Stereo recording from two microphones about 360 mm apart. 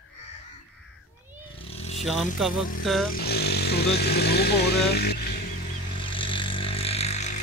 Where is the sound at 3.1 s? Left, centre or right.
Left.